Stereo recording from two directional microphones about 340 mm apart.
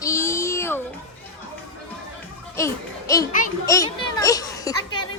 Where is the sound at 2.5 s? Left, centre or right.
Centre.